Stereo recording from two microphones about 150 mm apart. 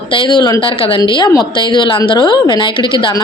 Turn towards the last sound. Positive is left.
turn(degrees=35)  # may be behind; listen again after turning